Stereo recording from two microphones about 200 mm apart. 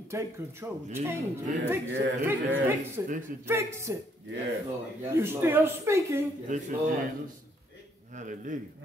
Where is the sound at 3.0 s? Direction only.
40° right (ahead or behind).